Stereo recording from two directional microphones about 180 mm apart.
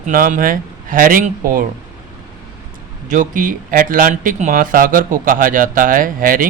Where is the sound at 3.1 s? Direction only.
45° right (ahead or behind).